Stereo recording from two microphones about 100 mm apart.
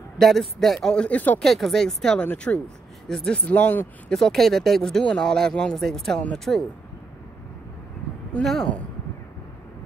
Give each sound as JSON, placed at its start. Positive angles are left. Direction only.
{"t": 0.2, "sound": "speech", "side_deg": 0}
{"t": 1.4, "sound": "speech", "side_deg": 0}
{"t": 3.4, "sound": "speech", "side_deg": 15}
{"t": 4.1, "sound": "speech", "side_deg": 5}
{"t": 8.3, "sound": "speech", "side_deg": 5}